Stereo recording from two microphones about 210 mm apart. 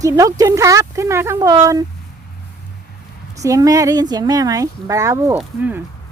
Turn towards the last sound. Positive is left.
turn(degrees=-5)  # may be behind; listen again after turning